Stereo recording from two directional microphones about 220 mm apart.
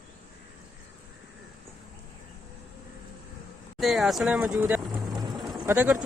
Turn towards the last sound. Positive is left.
turn(degrees=-10)  # may be behind; listen again after turning